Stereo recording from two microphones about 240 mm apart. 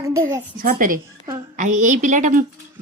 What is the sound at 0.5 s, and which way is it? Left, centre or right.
A woman's voice, right.